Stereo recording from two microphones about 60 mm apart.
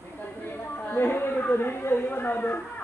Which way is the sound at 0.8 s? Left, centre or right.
Left.